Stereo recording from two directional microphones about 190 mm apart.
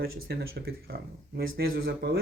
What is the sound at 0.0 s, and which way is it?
Speech, 60° right (ahead or behind).